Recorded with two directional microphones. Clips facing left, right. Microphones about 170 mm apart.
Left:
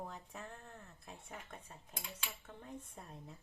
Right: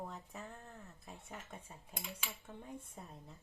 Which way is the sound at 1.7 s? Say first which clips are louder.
Right 2 dB; 10° right (ahead or behind).